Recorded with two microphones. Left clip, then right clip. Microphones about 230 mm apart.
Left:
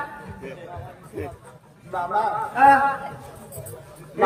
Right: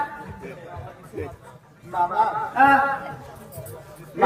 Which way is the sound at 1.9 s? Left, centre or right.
Centre.